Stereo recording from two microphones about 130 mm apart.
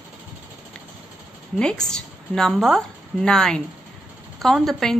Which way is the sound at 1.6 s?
5° left (ahead or behind).